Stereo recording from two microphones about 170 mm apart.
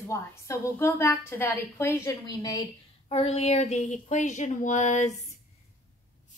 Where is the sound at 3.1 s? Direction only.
35° left (ahead or behind).